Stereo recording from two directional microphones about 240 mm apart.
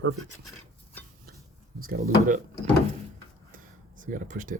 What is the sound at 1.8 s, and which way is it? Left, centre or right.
Speech, right.